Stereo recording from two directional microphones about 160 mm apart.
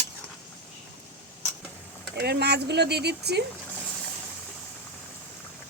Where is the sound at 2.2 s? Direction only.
90° right.